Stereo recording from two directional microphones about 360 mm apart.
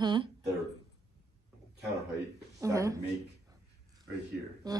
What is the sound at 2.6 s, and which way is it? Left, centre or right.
Speech, centre.